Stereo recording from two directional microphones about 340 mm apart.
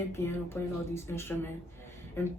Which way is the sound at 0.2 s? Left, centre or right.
Centre.